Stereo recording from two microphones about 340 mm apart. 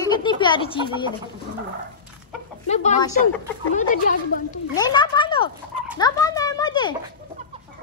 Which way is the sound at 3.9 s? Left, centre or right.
Left.